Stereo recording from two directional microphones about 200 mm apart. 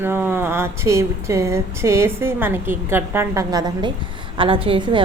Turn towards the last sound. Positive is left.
turn(degrees=-25)  # may be behind; listen again after turning